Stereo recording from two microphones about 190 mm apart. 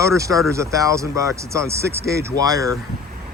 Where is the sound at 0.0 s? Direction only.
15° right (ahead or behind).